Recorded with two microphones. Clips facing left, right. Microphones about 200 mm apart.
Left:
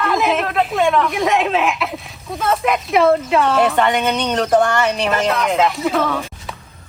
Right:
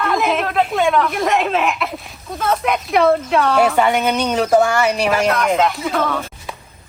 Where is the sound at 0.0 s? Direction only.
Centre (ahead or behind).